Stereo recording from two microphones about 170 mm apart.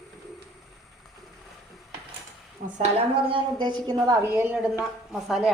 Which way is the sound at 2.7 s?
40° right (ahead or behind).